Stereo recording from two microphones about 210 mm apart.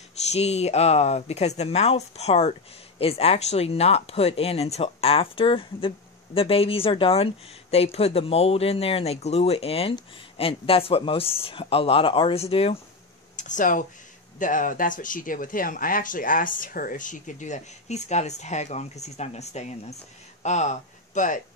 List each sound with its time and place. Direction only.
0.3 s speech: 30° left (ahead or behind)